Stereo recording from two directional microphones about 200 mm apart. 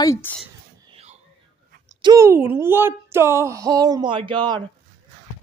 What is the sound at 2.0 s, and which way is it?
Speech, 15° right (ahead or behind).